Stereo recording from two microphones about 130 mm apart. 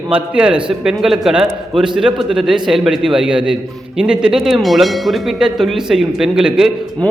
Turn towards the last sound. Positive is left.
turn(degrees=-5)  # may be behind; listen again after turning